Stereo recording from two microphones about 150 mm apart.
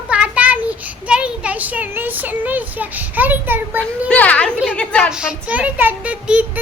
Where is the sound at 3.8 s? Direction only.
10° left (ahead or behind).